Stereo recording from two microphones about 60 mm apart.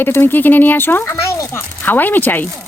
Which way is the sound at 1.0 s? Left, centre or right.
Left.